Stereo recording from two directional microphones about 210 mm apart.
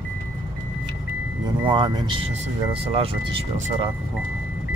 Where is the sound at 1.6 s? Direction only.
20° right (ahead or behind).